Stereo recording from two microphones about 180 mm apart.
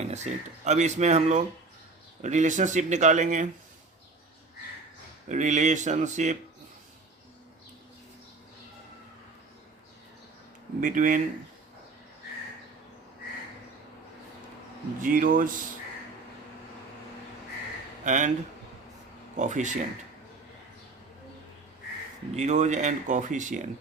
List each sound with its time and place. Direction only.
0.0 s speech: 40° right (ahead or behind)
5.3 s speech: 40° right (ahead or behind)
10.8 s speech: 45° right (ahead or behind)
15.0 s speech: 50° right (ahead or behind)
18.0 s speech: 45° right (ahead or behind)
19.4 s speech: 45° right (ahead or behind)
22.4 s speech: 40° right (ahead or behind)